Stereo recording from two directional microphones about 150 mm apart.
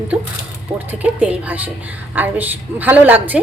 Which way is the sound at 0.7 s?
10° right (ahead or behind).